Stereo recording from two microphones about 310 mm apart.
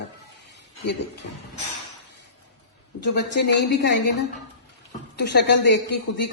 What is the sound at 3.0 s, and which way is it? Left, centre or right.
A woman's voice, left.